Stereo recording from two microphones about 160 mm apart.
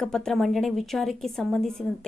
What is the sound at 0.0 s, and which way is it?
A woman's voice, 5° left (ahead or behind).